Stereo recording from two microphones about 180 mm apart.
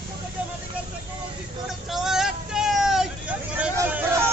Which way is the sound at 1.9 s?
Centre (ahead or behind).